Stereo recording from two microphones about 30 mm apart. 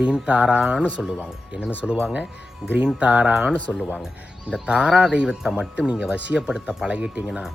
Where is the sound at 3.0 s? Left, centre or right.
Right.